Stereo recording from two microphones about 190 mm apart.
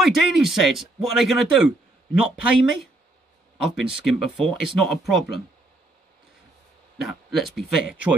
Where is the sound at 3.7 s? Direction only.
Centre (ahead or behind).